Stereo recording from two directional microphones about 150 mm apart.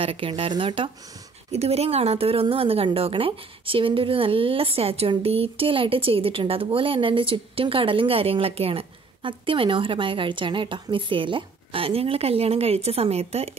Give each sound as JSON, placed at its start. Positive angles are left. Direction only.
{"t": 0.0, "sound": "a woman's voice", "side_deg": -35}